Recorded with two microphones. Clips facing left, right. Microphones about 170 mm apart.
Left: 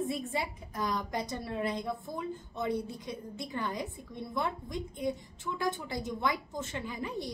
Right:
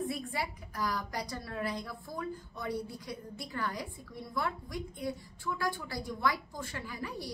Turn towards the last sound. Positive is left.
turn(degrees=20)  # may be behind; listen again after turning